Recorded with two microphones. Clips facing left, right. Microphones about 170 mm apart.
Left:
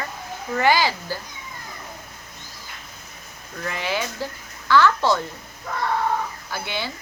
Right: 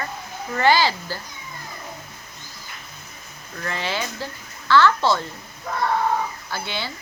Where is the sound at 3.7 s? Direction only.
15° left (ahead or behind).